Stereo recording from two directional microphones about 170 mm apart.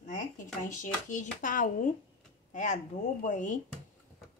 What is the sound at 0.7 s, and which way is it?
A woman's voice, 50° left (ahead or behind).